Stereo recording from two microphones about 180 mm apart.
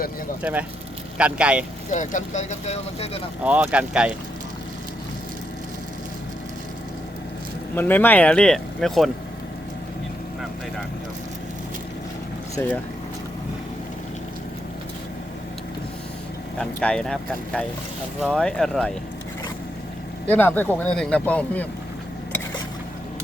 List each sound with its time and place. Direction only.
1.2 s speech: 5° right (ahead or behind)
1.9 s speech: 45° left (ahead or behind)
3.4 s speech: 10° right (ahead or behind)
7.8 s speech: 10° left (ahead or behind)
12.5 s speech: 10° left (ahead or behind)
16.6 s speech: 5° left (ahead or behind)
20.2 s speech: 10° left (ahead or behind)